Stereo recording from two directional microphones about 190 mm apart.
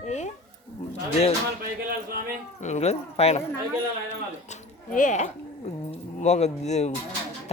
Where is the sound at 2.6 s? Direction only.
35° left (ahead or behind).